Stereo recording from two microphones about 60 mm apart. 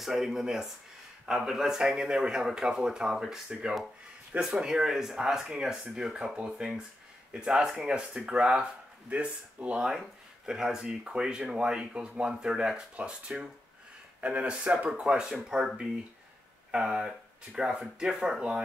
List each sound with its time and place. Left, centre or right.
0.0 s speech: centre
16.7 s speech: centre